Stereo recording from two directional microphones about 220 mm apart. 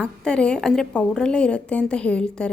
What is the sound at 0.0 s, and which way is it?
A woman's voice, 5° left (ahead or behind).